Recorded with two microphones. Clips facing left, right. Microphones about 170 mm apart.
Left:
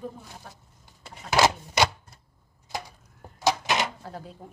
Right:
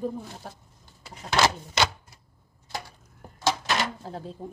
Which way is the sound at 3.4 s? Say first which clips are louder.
Left 1 dB; 20° left (ahead or behind).